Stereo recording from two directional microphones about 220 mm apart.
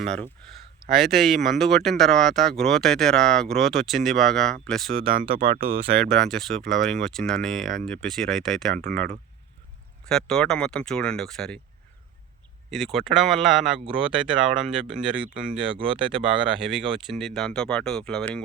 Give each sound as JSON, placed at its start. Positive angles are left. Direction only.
{"t": 0.0, "sound": "speech", "side_deg": 5}
{"t": 5.2, "sound": "speech", "side_deg": -25}
{"t": 6.1, "sound": "speech", "side_deg": 0}
{"t": 10.1, "sound": "speech", "side_deg": 0}
{"t": 12.7, "sound": "speech", "side_deg": 0}